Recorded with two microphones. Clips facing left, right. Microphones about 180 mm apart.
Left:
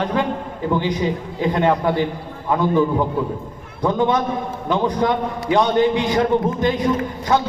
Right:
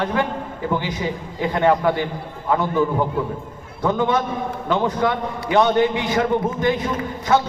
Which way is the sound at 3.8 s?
15° left (ahead or behind).